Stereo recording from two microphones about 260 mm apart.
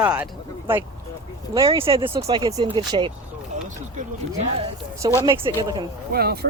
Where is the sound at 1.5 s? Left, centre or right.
Centre.